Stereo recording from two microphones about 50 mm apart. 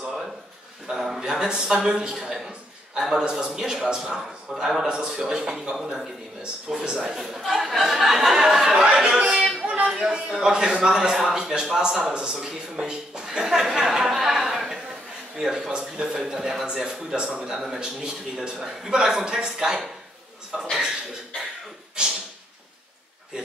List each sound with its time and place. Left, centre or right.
0.8 s a man's voice: centre
6.4 s a man's voice: centre
7.2 s a man's voice: centre
9.0 s a man's voice: centre
9.6 s music: right
9.8 s a sound: centre
10.3 s a man's voice: centre
16.3 s a man's voice: centre